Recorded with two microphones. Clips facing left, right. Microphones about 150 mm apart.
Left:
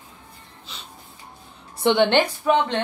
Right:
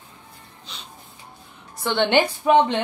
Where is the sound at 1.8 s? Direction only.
20° left (ahead or behind).